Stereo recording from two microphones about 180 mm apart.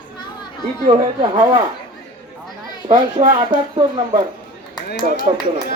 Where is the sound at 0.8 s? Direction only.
25° right (ahead or behind).